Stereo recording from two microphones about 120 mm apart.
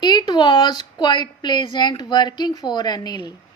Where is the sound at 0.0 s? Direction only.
35° left (ahead or behind).